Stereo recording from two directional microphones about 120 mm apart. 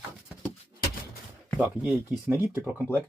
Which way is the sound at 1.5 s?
15° right (ahead or behind).